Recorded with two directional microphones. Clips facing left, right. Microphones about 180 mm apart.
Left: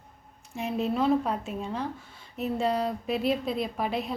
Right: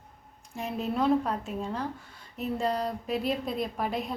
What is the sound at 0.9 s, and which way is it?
A woman's voice, 10° left (ahead or behind).